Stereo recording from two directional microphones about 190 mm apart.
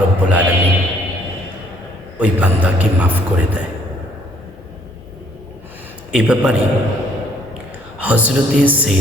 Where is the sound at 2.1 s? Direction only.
5° right (ahead or behind).